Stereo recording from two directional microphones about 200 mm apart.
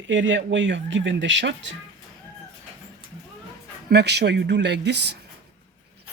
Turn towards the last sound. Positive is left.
turn(degrees=-55)  # may be behind; listen again after turning